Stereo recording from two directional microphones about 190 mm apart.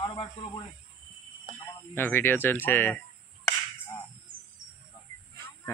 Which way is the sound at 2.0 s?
10° left (ahead or behind).